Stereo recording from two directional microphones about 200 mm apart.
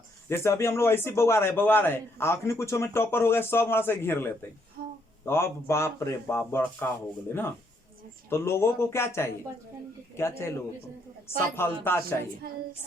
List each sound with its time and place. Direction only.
0.3 s a man's voice: 15° left (ahead or behind)
4.8 s a sound: 50° right (ahead or behind)
5.2 s a man's voice: 10° left (ahead or behind)
8.3 s a man's voice: 10° left (ahead or behind)
12.4 s a woman's voice: 50° right (ahead or behind)